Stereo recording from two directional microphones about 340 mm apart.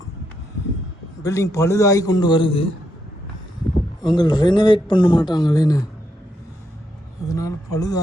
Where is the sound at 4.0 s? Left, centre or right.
Centre.